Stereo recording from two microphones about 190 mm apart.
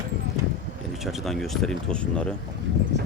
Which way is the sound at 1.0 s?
Centre (ahead or behind).